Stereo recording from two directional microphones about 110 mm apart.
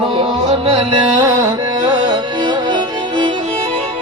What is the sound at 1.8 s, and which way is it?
Music, 45° right (ahead or behind).